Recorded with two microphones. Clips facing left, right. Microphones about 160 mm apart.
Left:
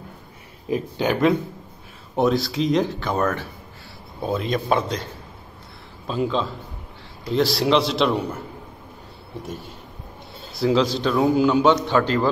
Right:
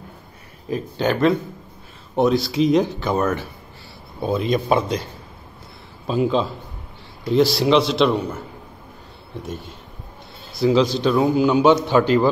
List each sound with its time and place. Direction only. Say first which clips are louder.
0.7 s speech: right 1 dB; 15° left (ahead or behind)
2.1 s a man's voice: right 2 dB; centre (ahead or behind)
6.0 s a man's voice: right 4 dB; 10° right (ahead or behind)
7.3 s a man's voice: right 3 dB; centre (ahead or behind)
10.6 s a man's voice: right 3 dB; centre (ahead or behind)